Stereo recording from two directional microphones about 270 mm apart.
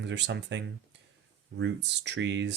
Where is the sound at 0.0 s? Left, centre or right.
Right.